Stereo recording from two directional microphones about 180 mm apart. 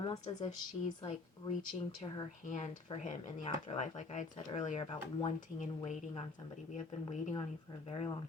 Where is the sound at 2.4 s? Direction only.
45° left (ahead or behind).